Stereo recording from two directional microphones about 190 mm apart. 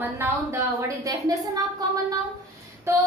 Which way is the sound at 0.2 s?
15° right (ahead or behind).